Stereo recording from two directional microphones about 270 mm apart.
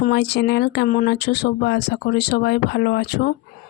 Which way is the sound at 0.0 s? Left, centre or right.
Left.